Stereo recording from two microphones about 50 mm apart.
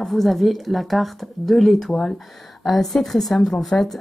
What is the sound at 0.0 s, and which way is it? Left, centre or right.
Speech, centre.